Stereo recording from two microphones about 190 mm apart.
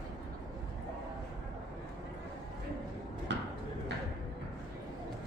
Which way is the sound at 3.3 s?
70° right (ahead or behind).